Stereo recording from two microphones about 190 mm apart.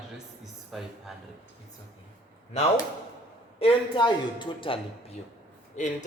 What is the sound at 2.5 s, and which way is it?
Speech, 35° left (ahead or behind).